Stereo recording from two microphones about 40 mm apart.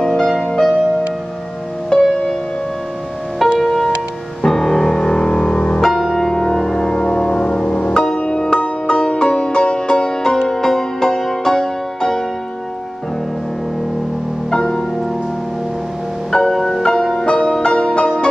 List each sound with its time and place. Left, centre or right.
0.0 s music: centre
1.9 s music: centre
3.5 s music: centre
5.8 s music: centre
6.1 s music: centre
14.5 s music: centre
16.3 s music: centre